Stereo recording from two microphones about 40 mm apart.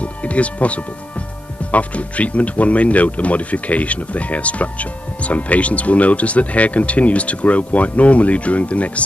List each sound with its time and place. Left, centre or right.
0.0 s speech: left